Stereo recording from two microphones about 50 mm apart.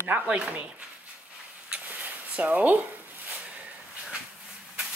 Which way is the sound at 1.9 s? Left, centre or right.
Right.